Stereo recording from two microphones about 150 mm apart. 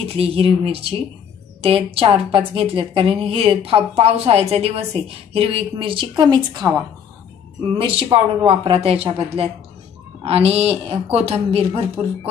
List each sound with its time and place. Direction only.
0.2 s a woman's voice: 40° right (ahead or behind)
7.7 s a woman's voice: 35° right (ahead or behind)